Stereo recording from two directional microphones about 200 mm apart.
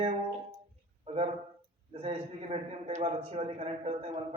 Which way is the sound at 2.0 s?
30° right (ahead or behind).